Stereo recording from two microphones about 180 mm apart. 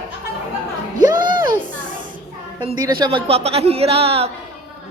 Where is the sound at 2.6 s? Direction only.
25° right (ahead or behind).